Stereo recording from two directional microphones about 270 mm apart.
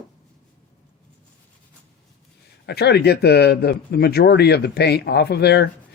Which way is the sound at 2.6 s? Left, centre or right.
Left.